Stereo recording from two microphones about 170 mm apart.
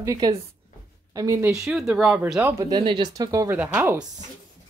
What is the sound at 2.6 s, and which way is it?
A woman's voice, 25° right (ahead or behind).